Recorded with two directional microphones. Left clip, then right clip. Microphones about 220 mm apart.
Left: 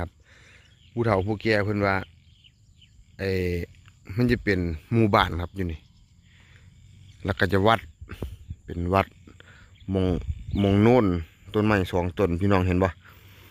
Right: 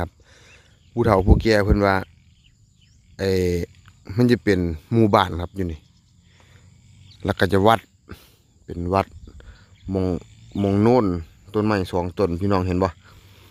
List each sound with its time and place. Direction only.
0.0 s a sound: 10° right (ahead or behind)
1.3 s speech: 15° right (ahead or behind)
3.2 s speech: 15° right (ahead or behind)
6.3 s wild animals: 10° right (ahead or behind)
7.2 s speech: 15° right (ahead or behind)